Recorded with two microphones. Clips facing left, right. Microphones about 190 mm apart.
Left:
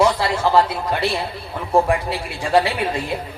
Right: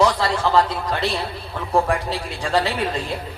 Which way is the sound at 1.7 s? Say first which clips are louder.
Left 3 dB; 15° left (ahead or behind).